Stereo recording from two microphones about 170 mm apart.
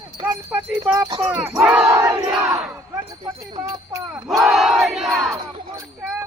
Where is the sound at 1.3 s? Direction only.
10° right (ahead or behind).